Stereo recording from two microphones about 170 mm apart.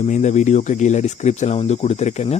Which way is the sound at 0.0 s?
45° left (ahead or behind).